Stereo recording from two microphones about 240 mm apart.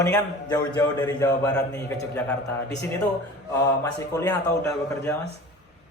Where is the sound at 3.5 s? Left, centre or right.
Centre.